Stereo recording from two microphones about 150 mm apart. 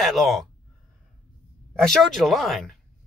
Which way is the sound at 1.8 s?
Centre (ahead or behind).